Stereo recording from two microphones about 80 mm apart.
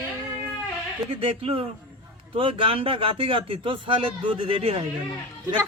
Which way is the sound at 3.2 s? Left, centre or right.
Right.